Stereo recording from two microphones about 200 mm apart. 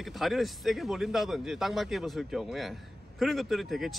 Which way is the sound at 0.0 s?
Centre (ahead or behind).